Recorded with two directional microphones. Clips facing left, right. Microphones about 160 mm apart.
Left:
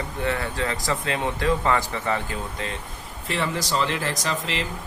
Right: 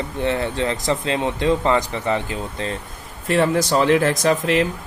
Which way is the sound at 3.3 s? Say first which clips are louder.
Right 9 dB; 50° right (ahead or behind).